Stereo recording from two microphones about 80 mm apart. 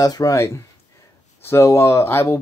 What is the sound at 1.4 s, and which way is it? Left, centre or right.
Speech, left.